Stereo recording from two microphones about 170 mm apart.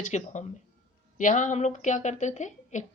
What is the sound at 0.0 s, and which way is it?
A woman's voice, 45° left (ahead or behind).